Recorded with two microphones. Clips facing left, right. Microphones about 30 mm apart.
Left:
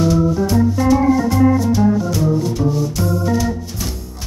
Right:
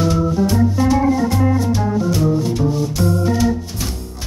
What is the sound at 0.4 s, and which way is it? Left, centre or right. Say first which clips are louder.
Music: even; centre.